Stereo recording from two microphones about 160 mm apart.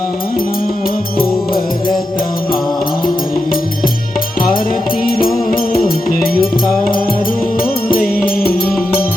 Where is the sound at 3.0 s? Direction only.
65° left (ahead or behind).